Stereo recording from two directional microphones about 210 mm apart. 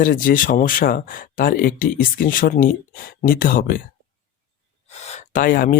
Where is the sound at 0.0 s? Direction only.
40° left (ahead or behind).